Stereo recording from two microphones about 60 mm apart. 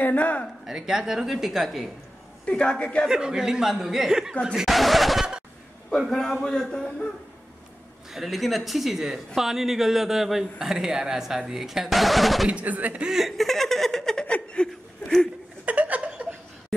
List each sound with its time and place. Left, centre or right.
0.0 s speech: left
0.7 s speech: centre
2.4 s a woman's voice: centre
3.1 s a man's voice: centre
8.1 s speech: centre
12.4 s speech: right
13.0 s chuckle: centre
14.2 s chuckle: centre
14.7 s chuckle: centre
15.6 s chuckle: right